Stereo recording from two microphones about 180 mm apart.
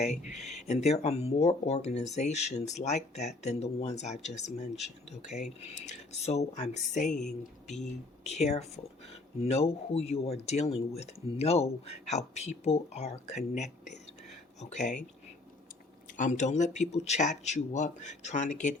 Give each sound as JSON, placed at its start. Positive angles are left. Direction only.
{"t": 0.0, "sound": "speech", "side_deg": 40}
{"t": 8.2, "sound": "speech", "side_deg": 40}
{"t": 16.1, "sound": "speech", "side_deg": 45}